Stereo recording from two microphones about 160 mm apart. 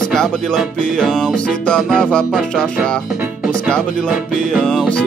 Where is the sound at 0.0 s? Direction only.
5° left (ahead or behind).